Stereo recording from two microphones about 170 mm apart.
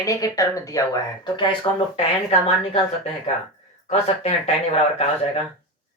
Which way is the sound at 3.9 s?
35° left (ahead or behind).